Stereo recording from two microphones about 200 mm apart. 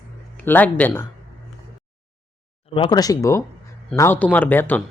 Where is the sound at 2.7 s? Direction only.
20° left (ahead or behind).